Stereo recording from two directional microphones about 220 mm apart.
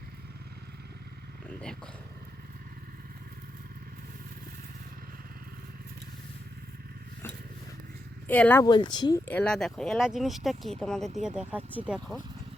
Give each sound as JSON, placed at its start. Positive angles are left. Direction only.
{"t": 8.3, "sound": "speech", "side_deg": 5}
{"t": 8.6, "sound": "speech", "side_deg": 20}
{"t": 9.2, "sound": "speech", "side_deg": 5}